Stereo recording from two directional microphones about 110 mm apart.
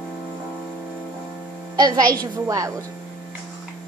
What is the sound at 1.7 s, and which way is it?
A woman's voice, 35° right (ahead or behind).